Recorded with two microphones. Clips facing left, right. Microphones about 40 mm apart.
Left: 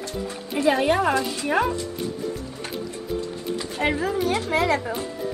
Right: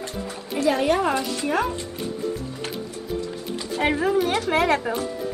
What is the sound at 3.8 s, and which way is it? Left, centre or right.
Speech, right.